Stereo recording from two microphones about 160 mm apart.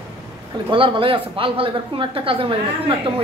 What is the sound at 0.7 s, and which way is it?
Speech, 35° right (ahead or behind).